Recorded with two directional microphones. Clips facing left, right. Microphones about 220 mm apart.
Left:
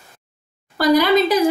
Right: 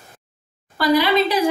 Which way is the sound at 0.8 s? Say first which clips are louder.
Left 2 dB; 45° left (ahead or behind).